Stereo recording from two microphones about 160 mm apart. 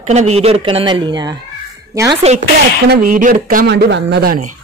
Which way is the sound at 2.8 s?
75° right (ahead or behind).